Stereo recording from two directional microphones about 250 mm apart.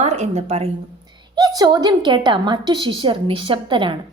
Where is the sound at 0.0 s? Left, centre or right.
Right.